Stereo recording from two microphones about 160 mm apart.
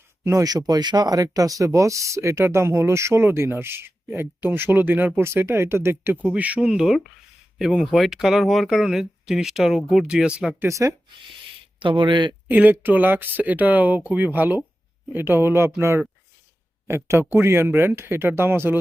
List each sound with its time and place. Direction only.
0.3 s speech: 20° right (ahead or behind)
10.7 s speech: 20° right (ahead or behind)
11.8 s speech: 30° right (ahead or behind)
12.5 s speech: 10° right (ahead or behind)